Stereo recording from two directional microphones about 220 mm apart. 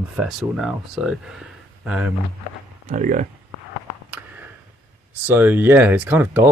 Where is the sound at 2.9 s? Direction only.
35° right (ahead or behind).